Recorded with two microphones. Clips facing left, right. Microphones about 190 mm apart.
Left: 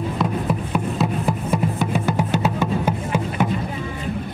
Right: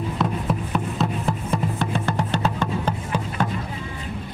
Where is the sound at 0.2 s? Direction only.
Centre (ahead or behind).